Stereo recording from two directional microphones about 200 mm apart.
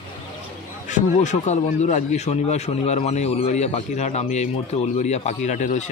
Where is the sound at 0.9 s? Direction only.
35° left (ahead or behind).